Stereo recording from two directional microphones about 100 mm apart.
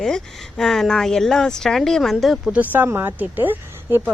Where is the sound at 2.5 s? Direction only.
15° right (ahead or behind).